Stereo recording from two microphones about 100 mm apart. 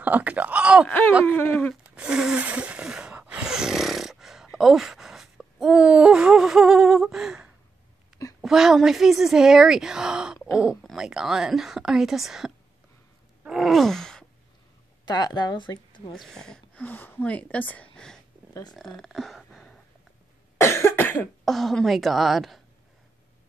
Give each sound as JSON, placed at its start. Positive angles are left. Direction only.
{"t": 0.0, "sound": "speech", "side_deg": -15}
{"t": 0.8, "sound": "a sound", "side_deg": 15}
{"t": 2.0, "sound": "a sound", "side_deg": -5}
{"t": 8.4, "sound": "a woman's voice", "side_deg": -5}
{"t": 10.8, "sound": "a sound", "side_deg": 5}
{"t": 11.1, "sound": "a woman's voice", "side_deg": -5}
{"t": 13.4, "sound": "groan", "side_deg": -5}
{"t": 15.0, "sound": "a woman's voice", "side_deg": 45}
{"t": 16.1, "sound": "speech", "side_deg": 5}
{"t": 18.5, "sound": "speech", "side_deg": 45}
{"t": 18.8, "sound": "a sound", "side_deg": 5}
{"t": 20.5, "sound": "cough", "side_deg": 30}
{"t": 21.5, "sound": "a woman's voice", "side_deg": 0}